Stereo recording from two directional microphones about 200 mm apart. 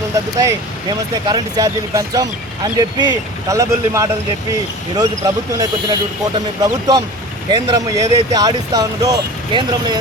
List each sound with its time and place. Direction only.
0.3 s speech: 20° right (ahead or behind)